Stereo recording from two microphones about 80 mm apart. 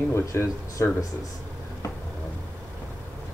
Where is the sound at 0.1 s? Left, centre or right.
Left.